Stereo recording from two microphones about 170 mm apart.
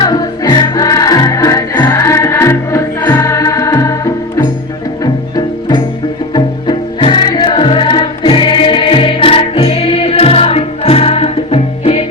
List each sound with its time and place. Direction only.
0.0 s music: 25° left (ahead or behind)
6.3 s music: 25° left (ahead or behind)